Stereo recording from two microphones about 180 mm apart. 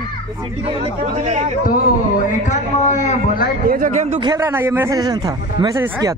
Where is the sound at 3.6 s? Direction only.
50° right (ahead or behind).